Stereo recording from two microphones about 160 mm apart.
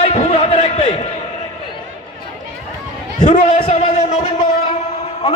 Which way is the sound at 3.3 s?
35° left (ahead or behind).